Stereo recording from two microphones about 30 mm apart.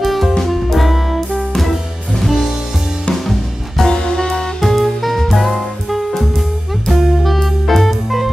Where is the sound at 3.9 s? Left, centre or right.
Left.